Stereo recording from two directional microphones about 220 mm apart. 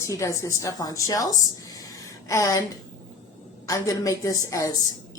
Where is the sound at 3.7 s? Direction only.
15° left (ahead or behind).